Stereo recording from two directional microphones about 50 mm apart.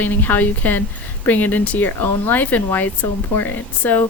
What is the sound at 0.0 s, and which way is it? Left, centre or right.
Speech, left.